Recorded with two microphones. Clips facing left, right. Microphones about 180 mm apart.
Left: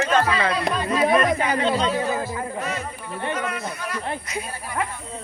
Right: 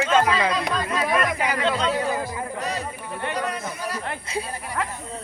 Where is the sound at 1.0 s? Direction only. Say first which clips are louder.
Left 5 dB; 30° left (ahead or behind).